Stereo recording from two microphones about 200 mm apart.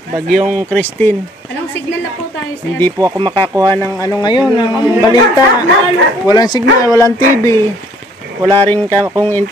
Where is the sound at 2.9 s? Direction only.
20° right (ahead or behind).